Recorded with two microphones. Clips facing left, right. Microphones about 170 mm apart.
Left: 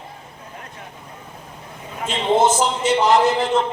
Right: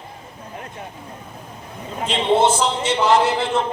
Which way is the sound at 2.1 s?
40° left (ahead or behind).